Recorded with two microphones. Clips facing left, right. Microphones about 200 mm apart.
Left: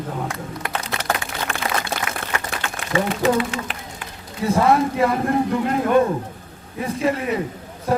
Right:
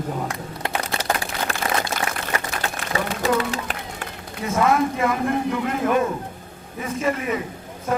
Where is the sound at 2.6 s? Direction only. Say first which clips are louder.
Left 3 dB; 35° right (ahead or behind).